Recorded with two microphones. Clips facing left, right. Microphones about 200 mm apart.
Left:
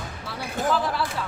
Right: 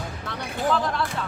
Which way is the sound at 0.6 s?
5° left (ahead or behind).